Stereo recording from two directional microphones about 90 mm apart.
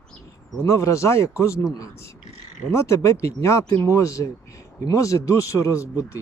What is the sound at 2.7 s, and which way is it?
Speech, 35° left (ahead or behind).